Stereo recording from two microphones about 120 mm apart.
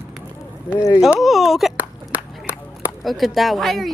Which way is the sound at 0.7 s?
25° left (ahead or behind).